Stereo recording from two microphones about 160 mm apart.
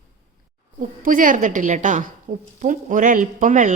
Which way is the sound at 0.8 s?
55° right (ahead or behind).